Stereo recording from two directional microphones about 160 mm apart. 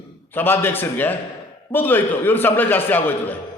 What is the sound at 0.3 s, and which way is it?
A man's voice, 15° left (ahead or behind).